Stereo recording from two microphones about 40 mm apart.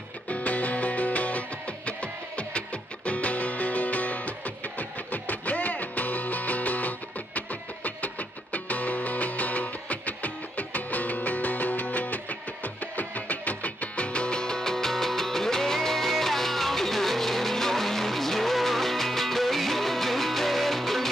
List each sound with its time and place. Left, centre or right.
0.3 s music: left; by 21.1 s centre